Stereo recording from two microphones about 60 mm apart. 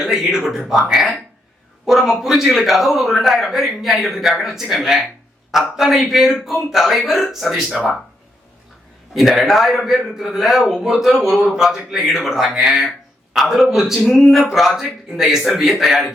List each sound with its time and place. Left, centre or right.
0.0 s a man's voice: centre
9.1 s a man's voice: centre